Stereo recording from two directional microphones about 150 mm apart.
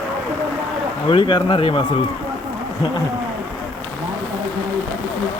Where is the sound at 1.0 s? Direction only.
35° left (ahead or behind).